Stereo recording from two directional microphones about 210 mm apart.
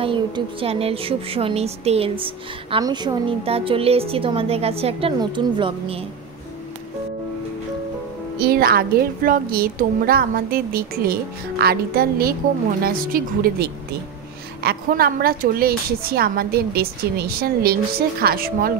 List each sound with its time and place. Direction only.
0.0 s a woman's voice: 25° right (ahead or behind)
8.4 s a woman's voice: 45° right (ahead or behind)